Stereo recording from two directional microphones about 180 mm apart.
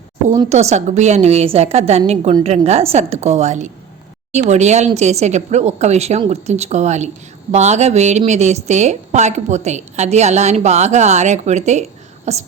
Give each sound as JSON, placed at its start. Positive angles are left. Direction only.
{"t": 0.5, "sound": "a woman's voice", "side_deg": -40}